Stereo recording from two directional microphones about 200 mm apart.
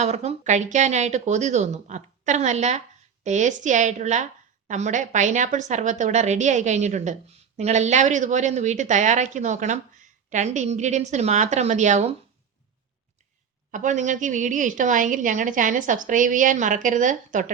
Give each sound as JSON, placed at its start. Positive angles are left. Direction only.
{"t": 0.0, "sound": "a woman's voice", "side_deg": -35}
{"t": 13.7, "sound": "a woman's voice", "side_deg": -40}